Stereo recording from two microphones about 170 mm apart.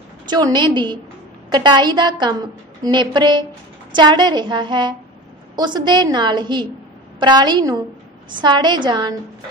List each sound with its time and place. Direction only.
0.3 s a woman's voice: 25° right (ahead or behind)